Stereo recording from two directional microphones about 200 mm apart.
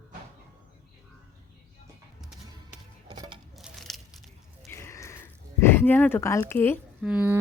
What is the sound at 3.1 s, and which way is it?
Coin, 25° right (ahead or behind).